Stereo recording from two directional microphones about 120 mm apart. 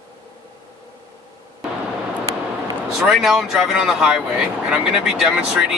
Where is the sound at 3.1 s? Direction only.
Centre (ahead or behind).